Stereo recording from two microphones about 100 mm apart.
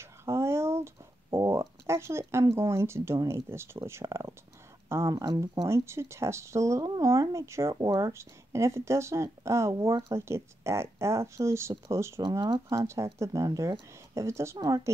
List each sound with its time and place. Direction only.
0.0 s a sound: 25° right (ahead or behind)
2.5 s speech: 25° right (ahead or behind)
4.8 s a sound: 25° right (ahead or behind)
5.1 s speech: 35° right (ahead or behind)
12.2 s speech: 45° right (ahead or behind)
12.6 s speech: 30° right (ahead or behind)